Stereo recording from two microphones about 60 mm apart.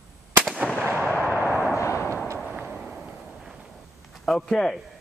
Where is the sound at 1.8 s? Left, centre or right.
Left.